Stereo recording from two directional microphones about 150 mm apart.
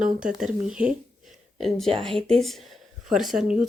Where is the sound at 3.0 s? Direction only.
Centre (ahead or behind).